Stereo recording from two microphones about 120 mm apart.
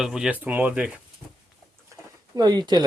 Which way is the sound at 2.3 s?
35° right (ahead or behind).